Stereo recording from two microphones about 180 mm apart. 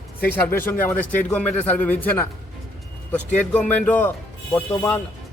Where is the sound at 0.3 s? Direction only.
10° left (ahead or behind).